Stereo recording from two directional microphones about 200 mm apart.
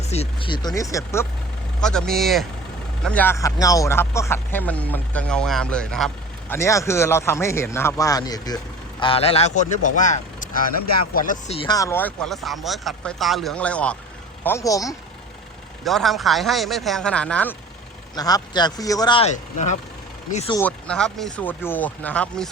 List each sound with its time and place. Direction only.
0.1 s a man's voice: 30° left (ahead or behind)
1.8 s a man's voice: 5° left (ahead or behind)
6.5 s a man's voice: 15° left (ahead or behind); by 11.5 s 40° left (ahead or behind)
11.5 s a man's voice: 20° left (ahead or behind)
15.8 s speech: centre (ahead or behind)
18.1 s speech: 20° left (ahead or behind); by 19.7 s 35° left (ahead or behind)
20.5 s a man's voice: 10° left (ahead or behind)